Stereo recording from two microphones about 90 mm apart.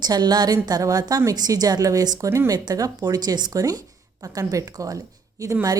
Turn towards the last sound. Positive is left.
turn(degrees=-40)  # may be behind; listen again after turning